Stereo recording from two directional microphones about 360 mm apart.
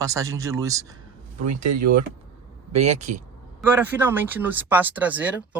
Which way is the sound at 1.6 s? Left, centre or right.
Right.